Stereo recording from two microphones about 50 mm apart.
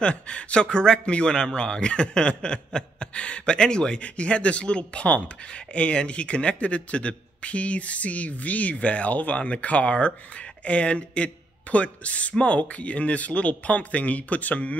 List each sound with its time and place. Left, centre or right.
0.0 s a man's voice: left